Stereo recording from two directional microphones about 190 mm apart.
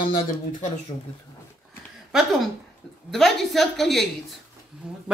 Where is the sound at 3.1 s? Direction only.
Centre (ahead or behind).